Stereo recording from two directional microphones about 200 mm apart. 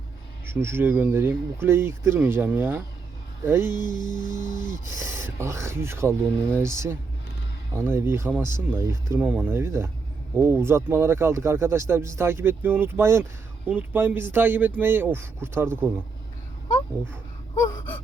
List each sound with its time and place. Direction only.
0.4 s speech: 10° right (ahead or behind)
4.2 s a sound: 40° left (ahead or behind)
4.9 s speech: 15° right (ahead or behind)